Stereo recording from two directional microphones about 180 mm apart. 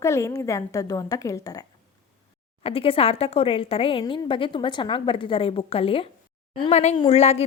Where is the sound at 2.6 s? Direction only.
30° left (ahead or behind).